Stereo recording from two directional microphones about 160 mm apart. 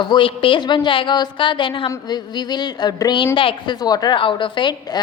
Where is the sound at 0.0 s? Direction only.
30° left (ahead or behind).